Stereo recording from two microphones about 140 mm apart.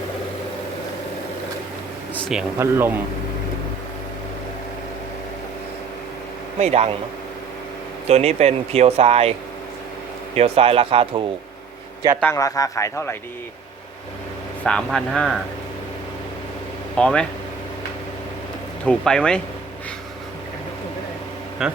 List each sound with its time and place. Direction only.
2.6 s speech: 15° right (ahead or behind)
6.6 s speech: 50° right (ahead or behind)
8.0 s speech: 50° right (ahead or behind)
10.3 s speech: 45° right (ahead or behind)
12.2 s a man's voice: 20° left (ahead or behind)
14.6 s speech: 5° left (ahead or behind)
17.0 s speech: 5° left (ahead or behind)
18.9 s speech: 5° left (ahead or behind)
21.6 s speech: 5° right (ahead or behind)